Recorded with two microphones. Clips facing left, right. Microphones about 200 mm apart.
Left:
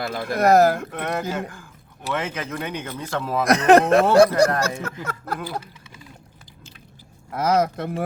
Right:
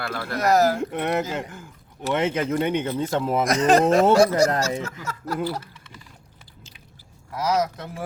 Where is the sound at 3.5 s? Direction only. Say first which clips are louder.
Left 4 dB; 60° left (ahead or behind).